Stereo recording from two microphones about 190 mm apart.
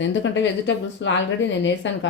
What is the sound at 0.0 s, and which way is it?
Speech, 75° left (ahead or behind).